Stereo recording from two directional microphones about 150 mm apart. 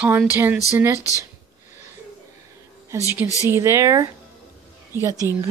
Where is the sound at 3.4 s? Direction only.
15° right (ahead or behind).